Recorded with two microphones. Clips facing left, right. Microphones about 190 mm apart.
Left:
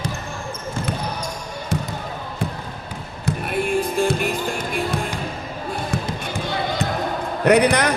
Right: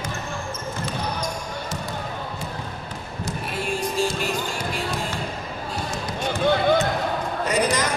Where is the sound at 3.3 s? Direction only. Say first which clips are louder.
Left 7 dB; 55° left (ahead or behind).